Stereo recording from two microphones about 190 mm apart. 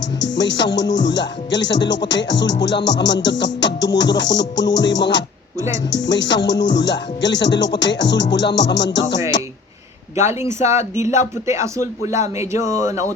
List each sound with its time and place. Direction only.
0.2 s music: 70° left (ahead or behind)
10.4 s speech: 15° right (ahead or behind)